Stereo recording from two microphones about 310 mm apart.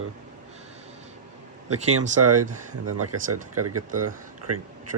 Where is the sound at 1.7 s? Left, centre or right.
Right.